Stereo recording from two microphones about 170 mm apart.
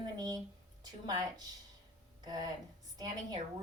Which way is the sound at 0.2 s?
20° right (ahead or behind).